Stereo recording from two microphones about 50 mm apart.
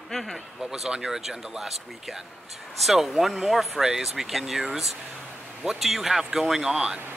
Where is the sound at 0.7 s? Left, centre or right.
Centre.